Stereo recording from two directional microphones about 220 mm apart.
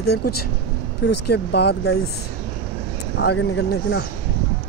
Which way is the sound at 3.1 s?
55° left (ahead or behind).